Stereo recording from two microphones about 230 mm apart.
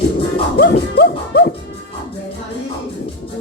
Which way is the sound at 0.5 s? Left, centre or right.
Left.